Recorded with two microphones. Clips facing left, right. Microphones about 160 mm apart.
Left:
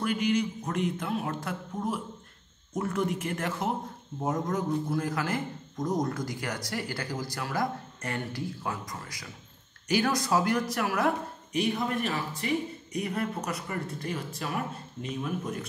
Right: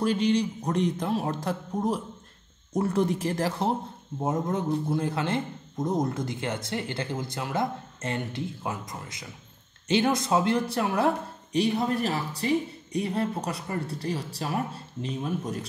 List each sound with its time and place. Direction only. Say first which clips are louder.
0.0 s a man's voice: right 3 dB; 30° right (ahead or behind)